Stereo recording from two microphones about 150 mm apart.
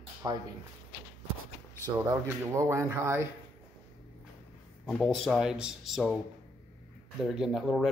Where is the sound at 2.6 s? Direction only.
20° right (ahead or behind).